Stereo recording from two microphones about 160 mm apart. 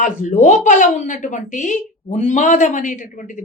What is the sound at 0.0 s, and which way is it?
A woman's voice, 50° left (ahead or behind).